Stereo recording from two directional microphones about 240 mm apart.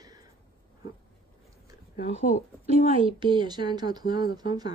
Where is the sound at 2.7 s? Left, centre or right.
Right.